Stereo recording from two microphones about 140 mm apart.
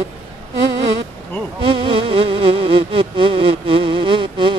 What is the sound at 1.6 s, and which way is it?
Music, 40° right (ahead or behind).